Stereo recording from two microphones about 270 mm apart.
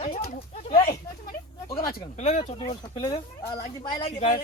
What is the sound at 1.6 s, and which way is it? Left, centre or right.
Speech, left.